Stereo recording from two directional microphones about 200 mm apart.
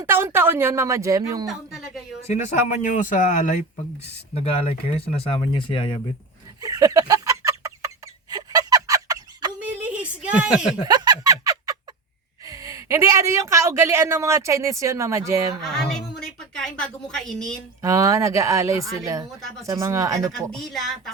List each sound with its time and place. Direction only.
0.0 s speech: 10° right (ahead or behind)
1.5 s a sound: centre (ahead or behind)
2.2 s speech: 35° left (ahead or behind)
4.9 s speech: 30° left (ahead or behind)
6.6 s chicken: 15° right (ahead or behind)
8.3 s fowl: 15° right (ahead or behind)
9.6 s a sound: 5° right (ahead or behind)
10.8 s a sound: 20° right (ahead or behind)
12.5 s speech: 15° right (ahead or behind)
15.6 s a woman's voice: centre (ahead or behind)
17.8 s speech: 15° right (ahead or behind)
20.5 s speech: centre (ahead or behind)